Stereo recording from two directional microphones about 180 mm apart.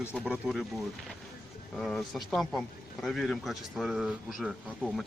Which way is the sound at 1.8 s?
Centre (ahead or behind).